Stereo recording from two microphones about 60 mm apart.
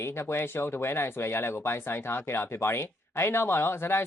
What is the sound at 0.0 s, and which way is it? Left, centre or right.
Speech, left.